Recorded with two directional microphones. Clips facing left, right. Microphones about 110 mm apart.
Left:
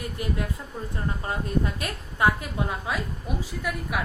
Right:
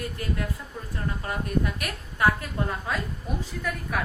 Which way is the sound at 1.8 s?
20° left (ahead or behind).